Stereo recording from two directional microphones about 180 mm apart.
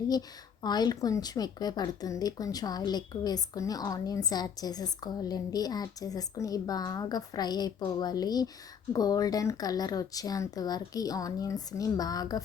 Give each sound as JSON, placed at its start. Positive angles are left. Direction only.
{"t": 0.1, "sound": "a woman's voice", "side_deg": 20}